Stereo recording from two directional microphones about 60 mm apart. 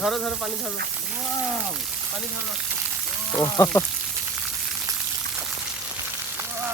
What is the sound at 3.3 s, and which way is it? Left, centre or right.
Speech, right.